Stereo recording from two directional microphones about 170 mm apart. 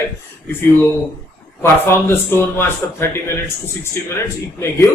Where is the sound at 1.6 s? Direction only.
15° left (ahead or behind).